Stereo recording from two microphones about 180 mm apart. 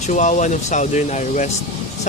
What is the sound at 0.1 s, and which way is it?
Speech, 40° left (ahead or behind).